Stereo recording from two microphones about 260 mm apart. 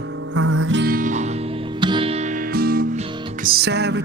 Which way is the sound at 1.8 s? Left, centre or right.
Centre.